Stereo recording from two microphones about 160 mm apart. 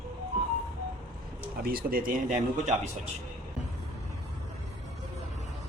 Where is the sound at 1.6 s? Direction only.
70° right (ahead or behind); by 3.1 s 50° right (ahead or behind).